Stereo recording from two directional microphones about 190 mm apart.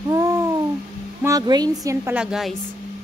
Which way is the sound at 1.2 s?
20° right (ahead or behind).